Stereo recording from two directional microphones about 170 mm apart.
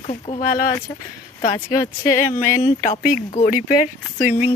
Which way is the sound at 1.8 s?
20° left (ahead or behind).